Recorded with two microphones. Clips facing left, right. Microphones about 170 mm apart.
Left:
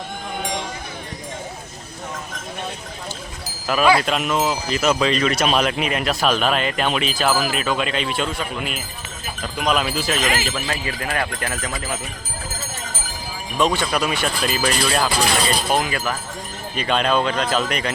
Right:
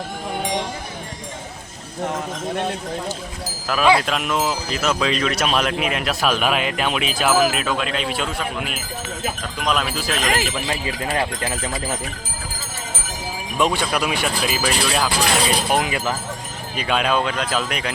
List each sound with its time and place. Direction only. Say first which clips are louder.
3.7 s speech: even; centre (ahead or behind)
10.7 s speech: right 1 dB; 20° right (ahead or behind)
13.6 s speech: left 1 dB; 10° right (ahead or behind)
15.7 s speech: right 1 dB; 15° right (ahead or behind)
16.7 s speech: left 1 dB; 5° right (ahead or behind)